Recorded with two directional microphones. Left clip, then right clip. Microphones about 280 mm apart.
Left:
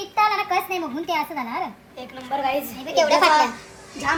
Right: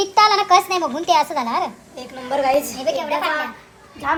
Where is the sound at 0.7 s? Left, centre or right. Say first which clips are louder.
Right 8 dB; right.